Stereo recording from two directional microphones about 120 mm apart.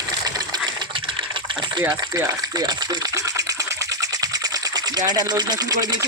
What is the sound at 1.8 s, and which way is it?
Speech, 25° right (ahead or behind).